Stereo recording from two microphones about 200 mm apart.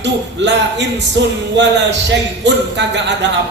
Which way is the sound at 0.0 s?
60° right (ahead or behind).